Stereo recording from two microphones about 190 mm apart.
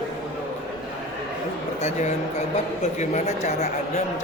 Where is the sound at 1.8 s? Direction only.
35° left (ahead or behind).